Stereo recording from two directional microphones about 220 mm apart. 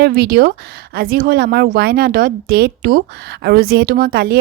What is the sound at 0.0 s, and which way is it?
A woman's voice, 45° right (ahead or behind).